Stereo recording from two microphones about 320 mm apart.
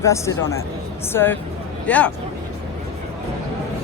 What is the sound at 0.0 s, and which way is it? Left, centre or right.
A man's voice, centre.